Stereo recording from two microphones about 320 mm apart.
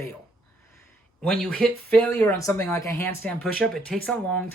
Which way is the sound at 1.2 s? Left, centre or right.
Centre.